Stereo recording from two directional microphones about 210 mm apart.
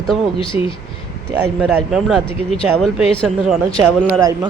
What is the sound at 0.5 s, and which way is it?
Speech, 10° right (ahead or behind).